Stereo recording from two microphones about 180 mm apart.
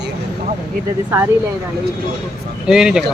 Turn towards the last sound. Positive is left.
turn(degrees=-5)  # may be behind; listen again after turning